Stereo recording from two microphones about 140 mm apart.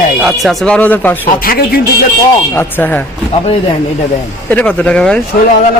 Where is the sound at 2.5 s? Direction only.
15° left (ahead or behind).